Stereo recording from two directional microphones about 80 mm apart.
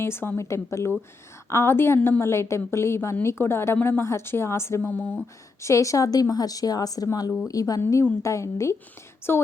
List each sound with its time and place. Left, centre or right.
0.0 s a woman's voice: left
4.8 s speech: centre
5.6 s a woman's voice: left
9.3 s speech: left